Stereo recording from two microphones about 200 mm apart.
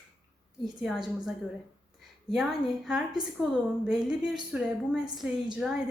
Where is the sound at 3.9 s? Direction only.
Centre (ahead or behind).